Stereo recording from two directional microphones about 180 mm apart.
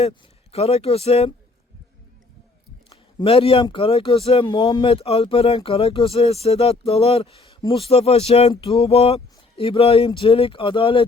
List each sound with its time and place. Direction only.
0.0 s speech: 35° left (ahead or behind)
3.2 s speech: 30° left (ahead or behind)